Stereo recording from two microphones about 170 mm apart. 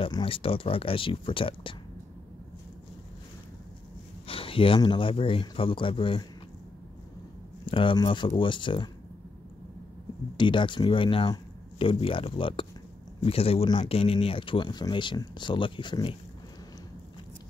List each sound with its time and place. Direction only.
0.0 s speech: 30° left (ahead or behind)
4.3 s speech: 35° left (ahead or behind)
7.6 s speech: 30° left (ahead or behind)
10.3 s speech: 30° left (ahead or behind)